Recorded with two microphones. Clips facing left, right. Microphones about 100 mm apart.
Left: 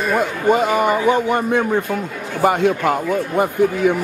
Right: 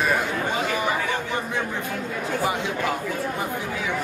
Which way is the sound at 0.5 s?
55° left (ahead or behind).